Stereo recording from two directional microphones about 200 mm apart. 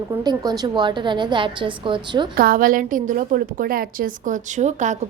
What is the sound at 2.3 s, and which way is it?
A woman's voice, 45° right (ahead or behind).